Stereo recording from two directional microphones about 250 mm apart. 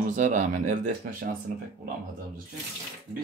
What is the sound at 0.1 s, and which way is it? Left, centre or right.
Speech, right.